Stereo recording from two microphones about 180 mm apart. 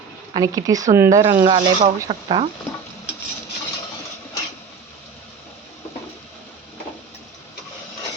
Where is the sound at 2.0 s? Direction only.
30° right (ahead or behind).